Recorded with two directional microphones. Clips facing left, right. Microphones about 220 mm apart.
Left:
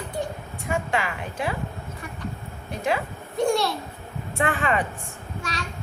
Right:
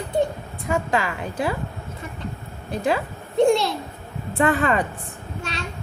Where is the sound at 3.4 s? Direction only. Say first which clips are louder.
Right 5 dB; 25° right (ahead or behind).